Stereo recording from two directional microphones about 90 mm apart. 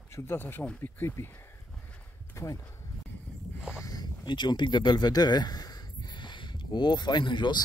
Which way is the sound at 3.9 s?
50° left (ahead or behind).